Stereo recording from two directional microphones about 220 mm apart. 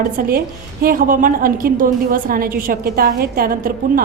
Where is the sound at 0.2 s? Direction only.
40° right (ahead or behind).